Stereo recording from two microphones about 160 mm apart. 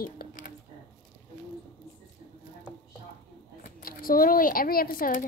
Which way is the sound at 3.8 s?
65° left (ahead or behind).